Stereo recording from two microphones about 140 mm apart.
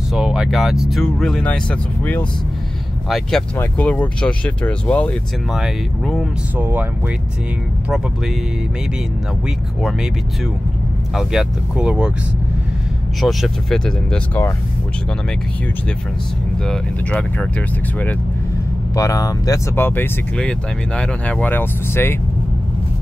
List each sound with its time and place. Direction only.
0.1 s speech: 5° right (ahead or behind)
6.5 s speech: 15° right (ahead or behind)
9.8 s speech: centre (ahead or behind)
11.1 s speech: 5° right (ahead or behind)
13.2 s speech: centre (ahead or behind)
16.6 s speech: 5° left (ahead or behind)
18.9 s speech: 25° left (ahead or behind)